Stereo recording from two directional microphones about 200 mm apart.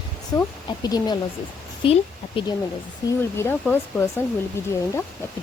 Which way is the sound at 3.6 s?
10° left (ahead or behind).